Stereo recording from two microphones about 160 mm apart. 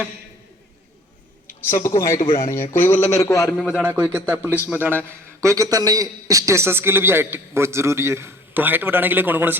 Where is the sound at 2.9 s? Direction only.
45° left (ahead or behind).